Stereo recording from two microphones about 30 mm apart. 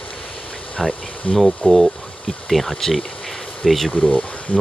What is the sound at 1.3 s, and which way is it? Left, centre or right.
Speech, left.